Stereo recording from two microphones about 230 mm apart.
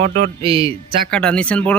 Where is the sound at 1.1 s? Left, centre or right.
Centre.